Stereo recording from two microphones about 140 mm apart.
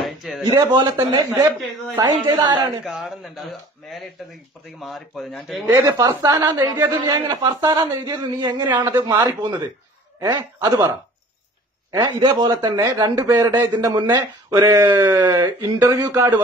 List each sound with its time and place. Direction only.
0.0 s a sound: centre (ahead or behind)
0.7 s a man's voice: 30° right (ahead or behind)
2.8 s speech: centre (ahead or behind)
5.7 s a man's voice: 25° right (ahead or behind)